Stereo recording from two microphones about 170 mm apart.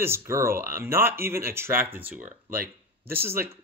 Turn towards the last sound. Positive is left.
turn(degrees=-15)  # may be behind; listen again after turning